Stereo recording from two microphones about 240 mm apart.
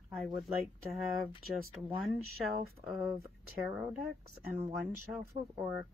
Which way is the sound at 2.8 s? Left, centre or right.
Centre.